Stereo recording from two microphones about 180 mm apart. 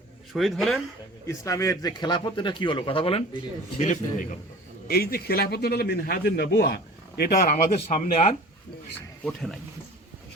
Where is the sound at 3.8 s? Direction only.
45° left (ahead or behind).